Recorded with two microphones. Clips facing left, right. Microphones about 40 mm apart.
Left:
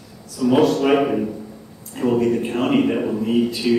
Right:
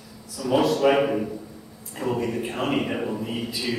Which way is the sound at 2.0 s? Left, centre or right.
Centre.